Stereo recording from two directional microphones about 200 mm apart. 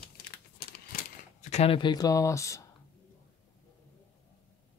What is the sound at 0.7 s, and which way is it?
Typewriter, 45° left (ahead or behind).